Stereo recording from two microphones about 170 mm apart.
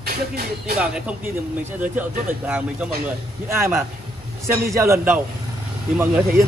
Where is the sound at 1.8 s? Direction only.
10° right (ahead or behind).